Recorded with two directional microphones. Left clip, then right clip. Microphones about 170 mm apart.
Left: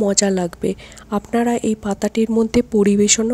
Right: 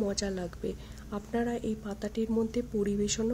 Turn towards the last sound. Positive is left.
turn(degrees=50)  # may be behind; listen again after turning